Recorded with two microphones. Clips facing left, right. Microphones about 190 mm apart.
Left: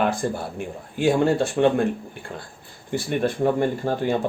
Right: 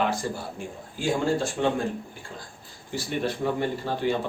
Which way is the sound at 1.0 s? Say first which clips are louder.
Left 6 dB; 65° left (ahead or behind).